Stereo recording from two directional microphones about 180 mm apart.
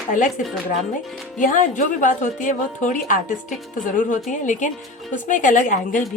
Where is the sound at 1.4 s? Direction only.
45° left (ahead or behind).